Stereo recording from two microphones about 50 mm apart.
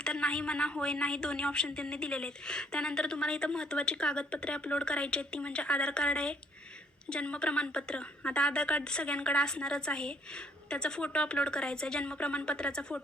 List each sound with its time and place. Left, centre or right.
0.0 s a woman's voice: centre